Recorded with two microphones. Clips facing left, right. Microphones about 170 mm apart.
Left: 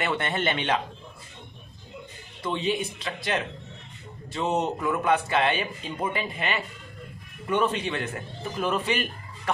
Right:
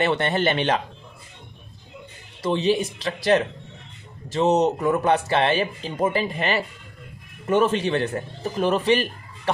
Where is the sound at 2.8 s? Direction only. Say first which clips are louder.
Right 5 dB; 90° right.